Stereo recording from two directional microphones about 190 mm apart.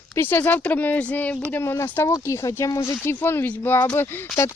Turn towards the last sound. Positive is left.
turn(degrees=10)  # may be behind; listen again after turning